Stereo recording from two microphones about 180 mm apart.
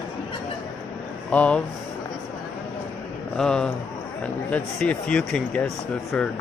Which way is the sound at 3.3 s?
5° left (ahead or behind).